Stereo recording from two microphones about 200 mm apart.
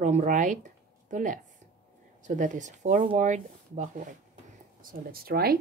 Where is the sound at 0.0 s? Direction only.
40° right (ahead or behind).